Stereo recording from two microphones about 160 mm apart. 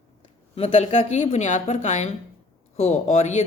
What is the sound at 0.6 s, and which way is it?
Speech, 35° left (ahead or behind).